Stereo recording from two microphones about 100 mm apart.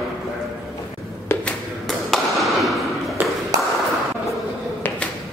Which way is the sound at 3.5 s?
40° right (ahead or behind).